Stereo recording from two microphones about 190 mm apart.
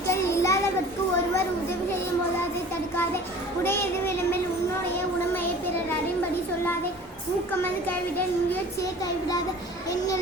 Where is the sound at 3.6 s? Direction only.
10° left (ahead or behind).